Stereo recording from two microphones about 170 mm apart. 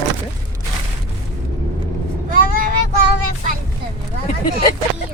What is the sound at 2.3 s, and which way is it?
Vehicle, 55° right (ahead or behind).